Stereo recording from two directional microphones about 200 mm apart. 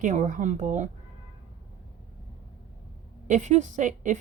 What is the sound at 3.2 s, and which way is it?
Speech, 35° right (ahead or behind).